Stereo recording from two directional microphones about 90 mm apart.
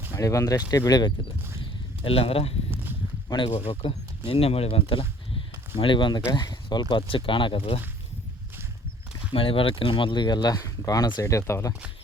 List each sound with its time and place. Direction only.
0.1 s speech: 35° left (ahead or behind)
2.0 s speech: 90° left
3.2 s speech: 60° left (ahead or behind)
4.3 s speech: 90° left; by 6.2 s 65° left (ahead or behind)
6.3 s speech: 50° left (ahead or behind); by 7.8 s 80° left
9.3 s speech: 90° left; by 11.7 s 30° left (ahead or behind)